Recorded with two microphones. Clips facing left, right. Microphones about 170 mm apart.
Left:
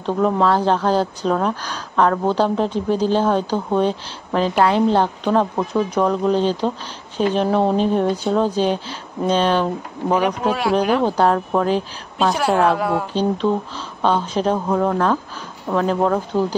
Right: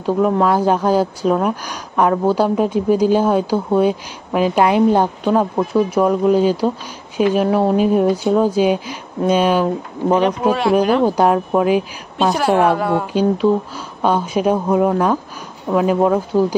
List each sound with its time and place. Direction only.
0.0 s speech: 10° right (ahead or behind)
10.5 s speech: centre (ahead or behind)